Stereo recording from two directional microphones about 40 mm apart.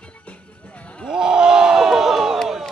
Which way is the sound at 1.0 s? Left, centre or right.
Centre.